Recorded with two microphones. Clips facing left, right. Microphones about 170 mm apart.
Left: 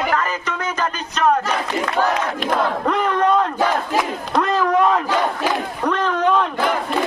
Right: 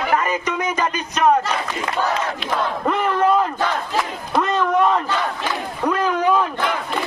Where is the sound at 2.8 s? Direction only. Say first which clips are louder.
Right 1 dB; 5° right (ahead or behind).